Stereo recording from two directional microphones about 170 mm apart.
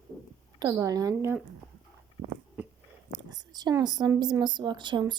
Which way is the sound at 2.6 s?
10° right (ahead or behind).